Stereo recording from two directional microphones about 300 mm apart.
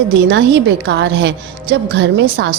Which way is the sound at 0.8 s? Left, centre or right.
Right.